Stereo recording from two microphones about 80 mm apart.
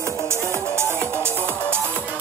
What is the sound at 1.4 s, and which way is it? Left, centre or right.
Music, left.